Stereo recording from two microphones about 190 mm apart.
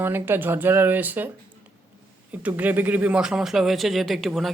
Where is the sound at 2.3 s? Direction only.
10° right (ahead or behind).